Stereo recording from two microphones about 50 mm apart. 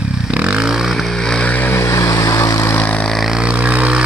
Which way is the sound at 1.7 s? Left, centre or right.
Left.